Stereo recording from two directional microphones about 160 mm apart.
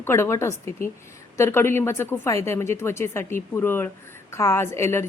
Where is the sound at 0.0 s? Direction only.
15° left (ahead or behind).